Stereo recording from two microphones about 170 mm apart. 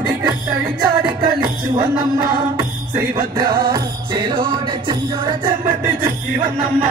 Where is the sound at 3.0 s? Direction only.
20° right (ahead or behind).